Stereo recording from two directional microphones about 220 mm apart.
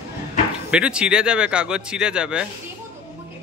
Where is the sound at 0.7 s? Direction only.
5° right (ahead or behind).